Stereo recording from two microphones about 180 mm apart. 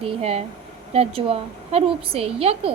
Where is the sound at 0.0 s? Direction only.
35° right (ahead or behind).